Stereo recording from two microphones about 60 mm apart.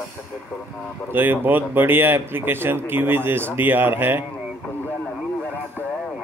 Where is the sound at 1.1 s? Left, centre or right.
Right.